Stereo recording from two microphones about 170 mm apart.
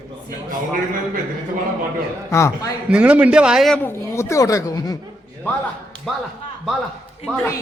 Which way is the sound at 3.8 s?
15° left (ahead or behind).